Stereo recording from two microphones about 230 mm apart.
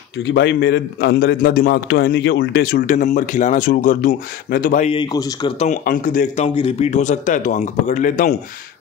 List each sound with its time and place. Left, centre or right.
0.2 s a man's voice: left; by 5.5 s centre
5.6 s a man's voice: left